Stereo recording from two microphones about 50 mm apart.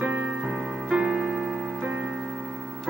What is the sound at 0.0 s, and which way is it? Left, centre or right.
Music, centre.